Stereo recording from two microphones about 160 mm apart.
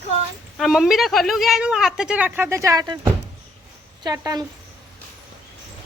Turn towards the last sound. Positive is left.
turn(degrees=-25)  # may be behind; listen again after turning